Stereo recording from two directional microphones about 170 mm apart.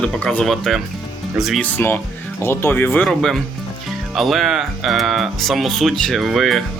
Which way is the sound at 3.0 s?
Centre (ahead or behind).